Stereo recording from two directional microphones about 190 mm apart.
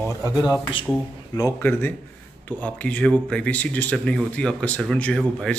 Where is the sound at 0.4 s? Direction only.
20° left (ahead or behind).